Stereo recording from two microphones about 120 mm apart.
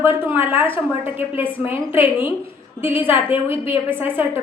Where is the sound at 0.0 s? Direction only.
20° right (ahead or behind).